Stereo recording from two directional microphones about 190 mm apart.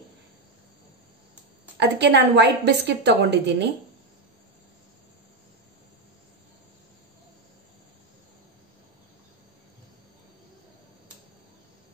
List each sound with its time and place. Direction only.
1.8 s a woman's voice: 65° right (ahead or behind)